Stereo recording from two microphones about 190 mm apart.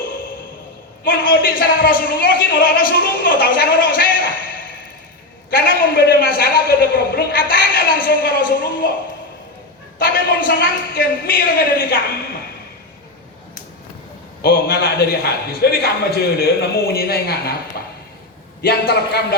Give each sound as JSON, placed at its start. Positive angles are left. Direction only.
{"t": 1.0, "sound": "a man's voice", "side_deg": 50}
{"t": 5.5, "sound": "a man's voice", "side_deg": 50}
{"t": 10.0, "sound": "a man's voice", "side_deg": 50}
{"t": 14.4, "sound": "a man's voice", "side_deg": 55}
{"t": 18.6, "sound": "a man's voice", "side_deg": 55}